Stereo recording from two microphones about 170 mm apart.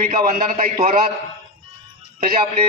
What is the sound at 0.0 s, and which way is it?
Speech, 50° right (ahead or behind).